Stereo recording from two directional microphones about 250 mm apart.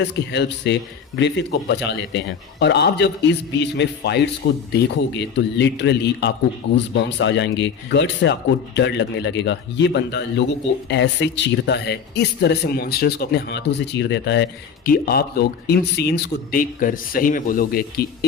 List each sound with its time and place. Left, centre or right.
0.0 s speech: left